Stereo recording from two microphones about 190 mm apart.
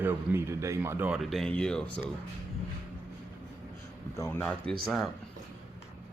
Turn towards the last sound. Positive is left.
turn(degrees=-5)  # may be behind; listen again after turning